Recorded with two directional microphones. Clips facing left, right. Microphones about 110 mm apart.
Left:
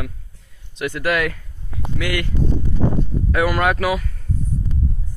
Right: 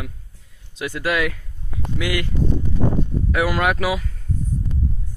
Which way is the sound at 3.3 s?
10° right (ahead or behind).